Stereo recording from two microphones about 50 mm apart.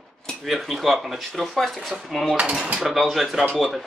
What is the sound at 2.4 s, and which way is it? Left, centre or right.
Speech, centre.